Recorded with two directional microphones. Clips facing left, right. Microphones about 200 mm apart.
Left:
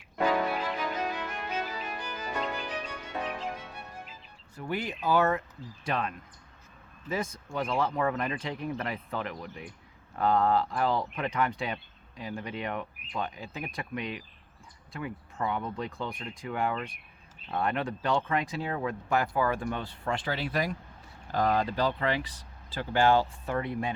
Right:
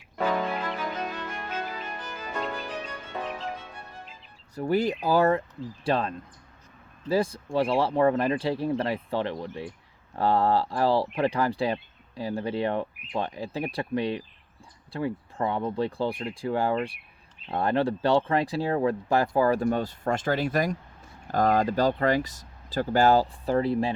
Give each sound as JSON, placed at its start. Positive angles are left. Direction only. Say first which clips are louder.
{"t": 0.2, "sound": "music", "louder": "even", "side_deg": 5}
{"t": 4.5, "sound": "speech", "louder": "right 9 dB", "side_deg": -40}